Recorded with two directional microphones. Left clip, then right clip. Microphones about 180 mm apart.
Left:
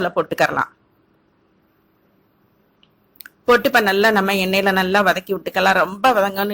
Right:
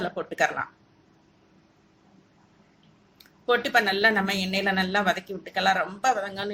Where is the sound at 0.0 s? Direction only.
45° left (ahead or behind).